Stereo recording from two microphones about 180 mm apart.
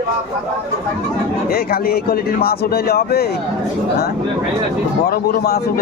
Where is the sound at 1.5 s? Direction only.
60° left (ahead or behind).